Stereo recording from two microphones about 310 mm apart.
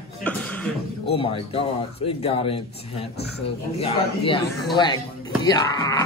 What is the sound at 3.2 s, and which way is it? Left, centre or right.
Speech, left.